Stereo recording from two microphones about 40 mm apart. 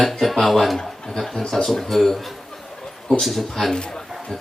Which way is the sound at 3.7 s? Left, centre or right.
Centre.